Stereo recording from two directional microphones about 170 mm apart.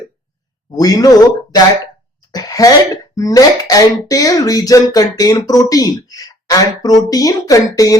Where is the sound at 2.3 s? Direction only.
20° left (ahead or behind).